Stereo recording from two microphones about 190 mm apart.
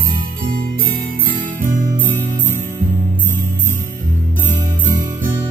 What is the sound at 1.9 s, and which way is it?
Music, 10° right (ahead or behind).